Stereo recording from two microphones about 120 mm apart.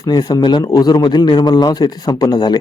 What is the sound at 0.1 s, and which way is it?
Speech, 35° left (ahead or behind).